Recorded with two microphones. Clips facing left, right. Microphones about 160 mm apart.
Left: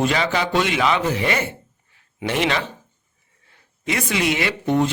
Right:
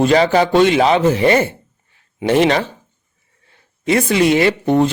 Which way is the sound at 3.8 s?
35° right (ahead or behind).